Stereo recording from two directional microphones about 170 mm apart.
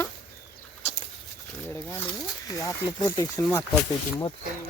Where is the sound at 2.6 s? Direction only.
20° left (ahead or behind).